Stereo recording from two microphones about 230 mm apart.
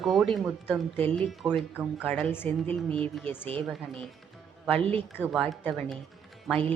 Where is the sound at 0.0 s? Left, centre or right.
Centre.